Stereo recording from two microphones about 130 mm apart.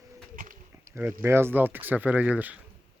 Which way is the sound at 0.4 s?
90° right.